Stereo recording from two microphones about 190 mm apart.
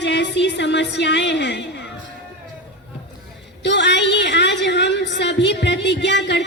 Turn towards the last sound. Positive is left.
turn(degrees=65)  # may be behind; listen again after turning